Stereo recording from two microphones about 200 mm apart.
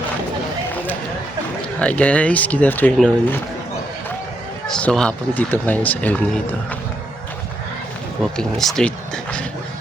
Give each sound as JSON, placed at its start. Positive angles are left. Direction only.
{"t": 1.8, "sound": "speech", "side_deg": 5}
{"t": 4.7, "sound": "speech", "side_deg": 5}
{"t": 8.2, "sound": "speech", "side_deg": 0}